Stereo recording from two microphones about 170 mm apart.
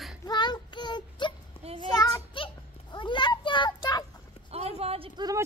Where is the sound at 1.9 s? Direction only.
25° left (ahead or behind).